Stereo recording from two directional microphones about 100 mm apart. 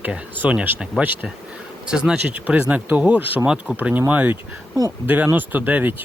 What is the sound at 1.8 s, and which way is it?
Speech, 10° right (ahead or behind).